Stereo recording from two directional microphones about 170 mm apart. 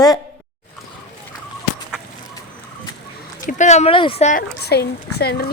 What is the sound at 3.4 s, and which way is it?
Speech, 45° left (ahead or behind).